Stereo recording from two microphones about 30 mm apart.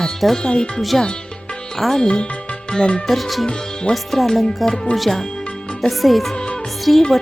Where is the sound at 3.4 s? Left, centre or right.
Left.